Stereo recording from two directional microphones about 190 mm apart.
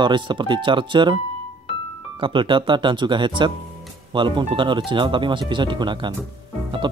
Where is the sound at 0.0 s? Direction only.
25° right (ahead or behind).